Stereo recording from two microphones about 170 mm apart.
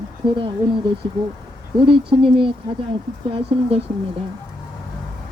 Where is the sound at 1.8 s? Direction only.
30° right (ahead or behind).